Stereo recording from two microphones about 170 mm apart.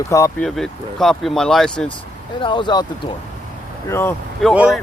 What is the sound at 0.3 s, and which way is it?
Speech, 5° left (ahead or behind).